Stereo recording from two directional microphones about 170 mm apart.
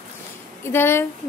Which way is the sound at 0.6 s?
15° left (ahead or behind).